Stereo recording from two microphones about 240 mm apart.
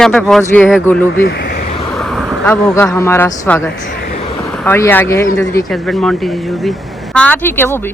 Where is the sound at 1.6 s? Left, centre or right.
Left.